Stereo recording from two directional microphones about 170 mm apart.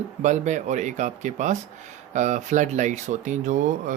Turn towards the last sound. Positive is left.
turn(degrees=-50)  # may be behind; listen again after turning